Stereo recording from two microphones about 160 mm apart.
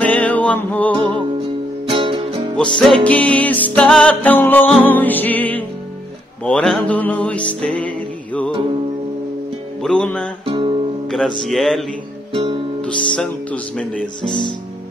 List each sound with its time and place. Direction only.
0.0 s music: 10° left (ahead or behind)
1.9 s music: 35° right (ahead or behind)
2.5 s music: 5° left (ahead or behind)
9.8 s music: 5° left (ahead or behind)
10.4 s music: 35° right (ahead or behind)
11.1 s music: centre (ahead or behind)
12.3 s music: 35° right (ahead or behind)
12.8 s music: 5° left (ahead or behind)